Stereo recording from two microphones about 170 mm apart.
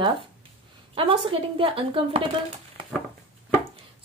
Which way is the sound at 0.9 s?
30° right (ahead or behind).